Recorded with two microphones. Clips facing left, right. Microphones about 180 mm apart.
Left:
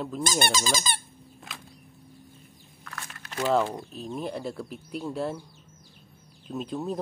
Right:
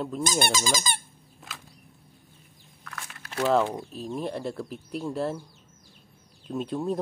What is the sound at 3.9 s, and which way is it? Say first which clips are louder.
Speech: right 1 dB; centre (ahead or behind).